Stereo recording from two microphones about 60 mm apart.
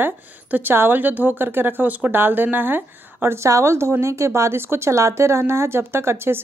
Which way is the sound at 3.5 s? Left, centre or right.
Right.